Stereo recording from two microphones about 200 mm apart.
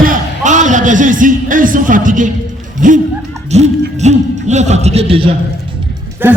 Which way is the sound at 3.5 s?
35° right (ahead or behind).